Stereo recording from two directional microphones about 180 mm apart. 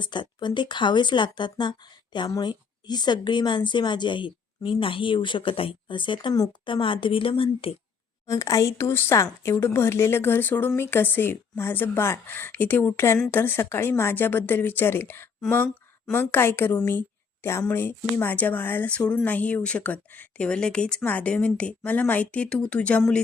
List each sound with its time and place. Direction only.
0.0 s a woman's voice: 25° left (ahead or behind)
8.3 s speech: 20° left (ahead or behind)